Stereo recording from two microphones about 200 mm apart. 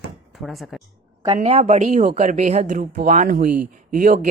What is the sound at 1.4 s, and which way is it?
A woman's voice, 35° right (ahead or behind).